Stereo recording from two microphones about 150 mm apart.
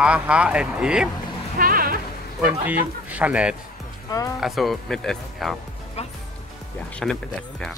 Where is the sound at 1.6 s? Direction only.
70° right (ahead or behind).